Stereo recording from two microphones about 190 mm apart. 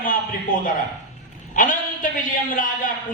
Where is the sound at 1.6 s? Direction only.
45° left (ahead or behind).